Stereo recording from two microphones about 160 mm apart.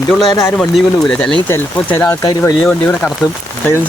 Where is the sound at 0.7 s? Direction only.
5° left (ahead or behind).